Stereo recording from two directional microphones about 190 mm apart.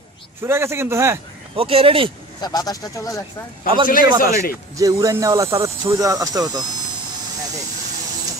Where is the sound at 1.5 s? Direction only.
30° right (ahead or behind).